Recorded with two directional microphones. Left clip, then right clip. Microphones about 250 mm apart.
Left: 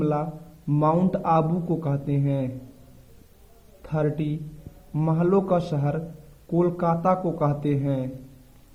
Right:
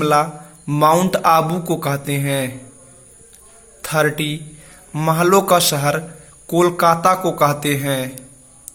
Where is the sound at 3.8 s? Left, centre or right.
Centre.